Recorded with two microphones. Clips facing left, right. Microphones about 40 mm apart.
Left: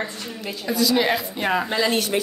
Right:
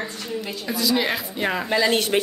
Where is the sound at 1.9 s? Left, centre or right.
Right.